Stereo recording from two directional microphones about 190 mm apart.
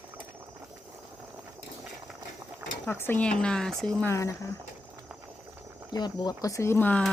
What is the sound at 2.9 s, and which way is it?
Speech, 10° left (ahead or behind).